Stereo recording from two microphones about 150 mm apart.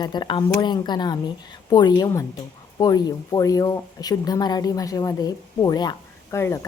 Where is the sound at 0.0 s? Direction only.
30° left (ahead or behind).